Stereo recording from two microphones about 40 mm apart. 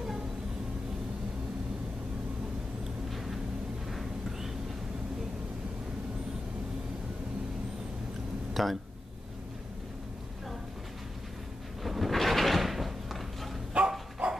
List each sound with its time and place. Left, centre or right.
3.9 s a sound: centre
8.6 s speech: centre
11.8 s drawer open or close: centre
13.7 s dog: right